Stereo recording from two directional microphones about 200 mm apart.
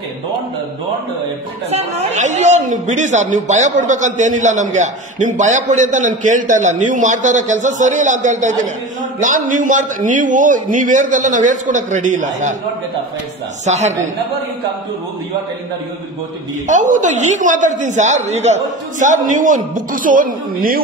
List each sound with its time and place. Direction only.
1.7 s a man's voice: 35° right (ahead or behind)
13.7 s a man's voice: 35° right (ahead or behind)
16.6 s a man's voice: 40° right (ahead or behind)